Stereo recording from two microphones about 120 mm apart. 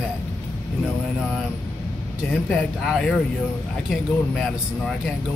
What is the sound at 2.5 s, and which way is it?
Speech, 5° left (ahead or behind).